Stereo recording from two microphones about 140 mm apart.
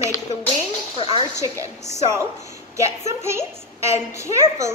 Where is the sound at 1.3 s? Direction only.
20° right (ahead or behind).